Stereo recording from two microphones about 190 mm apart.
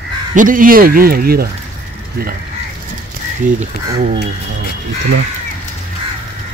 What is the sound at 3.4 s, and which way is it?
Speech, 45° right (ahead or behind).